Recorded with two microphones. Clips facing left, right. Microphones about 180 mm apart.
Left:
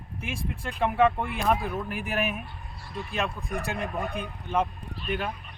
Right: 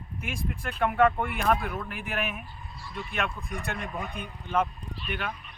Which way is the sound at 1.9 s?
40° left (ahead or behind).